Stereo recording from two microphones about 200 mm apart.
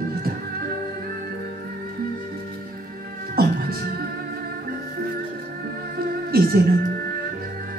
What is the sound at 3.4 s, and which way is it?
Beatboxing, 50° right (ahead or behind).